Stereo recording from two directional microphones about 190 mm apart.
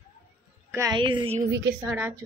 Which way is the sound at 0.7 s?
20° right (ahead or behind).